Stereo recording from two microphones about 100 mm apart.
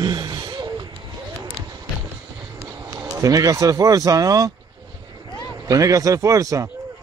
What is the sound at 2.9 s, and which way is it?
Speech, 35° right (ahead or behind).